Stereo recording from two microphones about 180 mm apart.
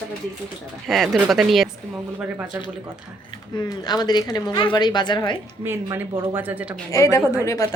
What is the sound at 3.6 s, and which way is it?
A woman's voice, 25° left (ahead or behind).